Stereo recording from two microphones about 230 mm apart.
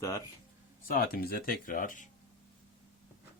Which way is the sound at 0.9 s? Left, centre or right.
Left.